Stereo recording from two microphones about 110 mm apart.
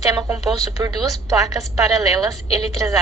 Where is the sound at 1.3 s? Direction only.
30° right (ahead or behind).